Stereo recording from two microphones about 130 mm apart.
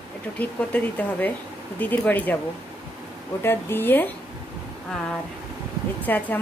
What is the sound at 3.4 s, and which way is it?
Speech, 15° left (ahead or behind).